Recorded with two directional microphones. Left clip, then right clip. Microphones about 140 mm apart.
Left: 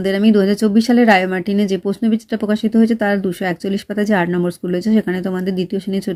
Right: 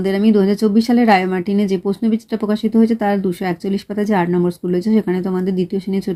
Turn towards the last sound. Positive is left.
turn(degrees=20)  # may be behind; listen again after turning